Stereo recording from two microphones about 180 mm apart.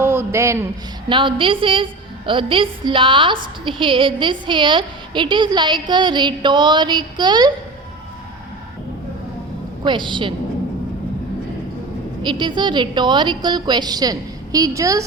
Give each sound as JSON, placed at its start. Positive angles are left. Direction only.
{"t": 0.0, "sound": "a man's voice", "side_deg": -15}
{"t": 1.0, "sound": "a woman's voice", "side_deg": -25}
{"t": 9.8, "sound": "a woman's voice", "side_deg": -25}
{"t": 12.2, "sound": "a woman's voice", "side_deg": -25}